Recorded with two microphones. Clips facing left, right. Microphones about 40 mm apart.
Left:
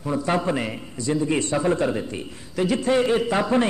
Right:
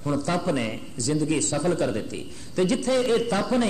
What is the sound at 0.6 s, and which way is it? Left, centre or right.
Speech, centre.